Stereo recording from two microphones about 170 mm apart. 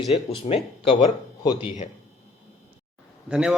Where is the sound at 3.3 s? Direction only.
5° right (ahead or behind).